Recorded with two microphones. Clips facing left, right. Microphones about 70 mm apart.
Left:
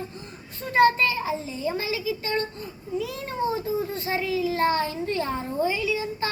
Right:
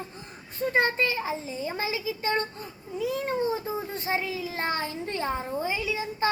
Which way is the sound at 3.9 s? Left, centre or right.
Right.